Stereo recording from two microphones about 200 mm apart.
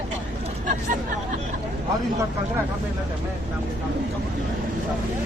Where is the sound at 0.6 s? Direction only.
40° right (ahead or behind).